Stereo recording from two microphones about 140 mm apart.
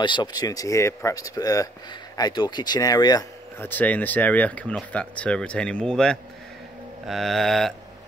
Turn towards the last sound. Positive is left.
turn(degrees=0)  # may be behind; listen again after turning